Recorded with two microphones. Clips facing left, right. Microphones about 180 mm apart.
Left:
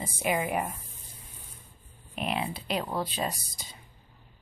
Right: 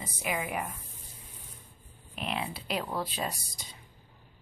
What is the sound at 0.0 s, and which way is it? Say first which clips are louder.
Speech: left 5 dB; 30° left (ahead or behind).